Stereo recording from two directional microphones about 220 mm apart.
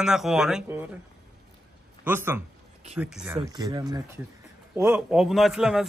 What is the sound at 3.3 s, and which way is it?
Speech, 20° right (ahead or behind).